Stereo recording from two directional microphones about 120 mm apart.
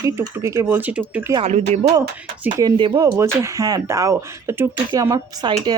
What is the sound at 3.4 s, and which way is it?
Speech, 30° right (ahead or behind).